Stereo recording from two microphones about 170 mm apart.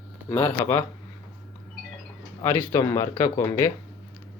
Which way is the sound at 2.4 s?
15° left (ahead or behind).